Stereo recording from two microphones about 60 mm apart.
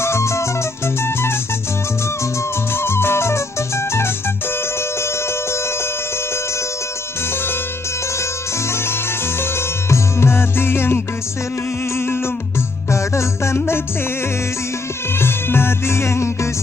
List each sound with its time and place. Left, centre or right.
0.0 s music: left
2.7 s music: left
9.4 s music: left
12.9 s music: left
15.1 s music: left